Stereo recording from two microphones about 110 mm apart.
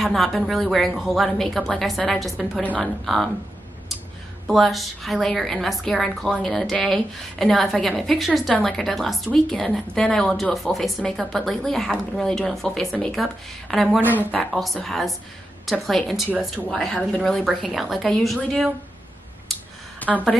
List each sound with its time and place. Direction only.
0.0 s speech: centre (ahead or behind)
4.5 s speech: centre (ahead or behind)
14.0 s a woman's voice: 15° right (ahead or behind)
14.3 s speech: centre (ahead or behind)
20.0 s speech: 15° left (ahead or behind)